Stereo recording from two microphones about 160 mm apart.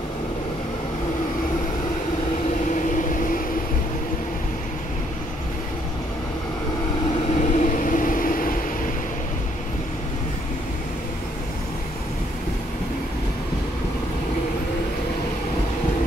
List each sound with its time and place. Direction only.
2.7 s vehicle: 55° left (ahead or behind)
7.1 s vehicle: 45° left (ahead or behind); by 8.5 s 60° left (ahead or behind)